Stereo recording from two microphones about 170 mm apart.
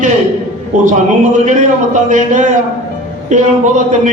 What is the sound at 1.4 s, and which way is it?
A man's voice, 45° right (ahead or behind).